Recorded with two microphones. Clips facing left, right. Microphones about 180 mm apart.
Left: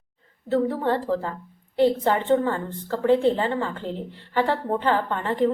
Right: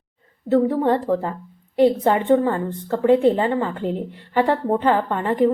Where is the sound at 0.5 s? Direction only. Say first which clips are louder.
Right 5 dB; 15° right (ahead or behind).